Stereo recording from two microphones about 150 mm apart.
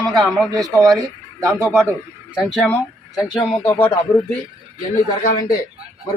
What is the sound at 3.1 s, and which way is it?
Speech, 30° left (ahead or behind).